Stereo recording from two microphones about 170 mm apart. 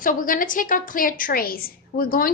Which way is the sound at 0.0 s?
55° left (ahead or behind).